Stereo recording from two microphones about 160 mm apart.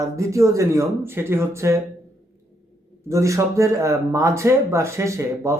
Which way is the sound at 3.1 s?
20° right (ahead or behind).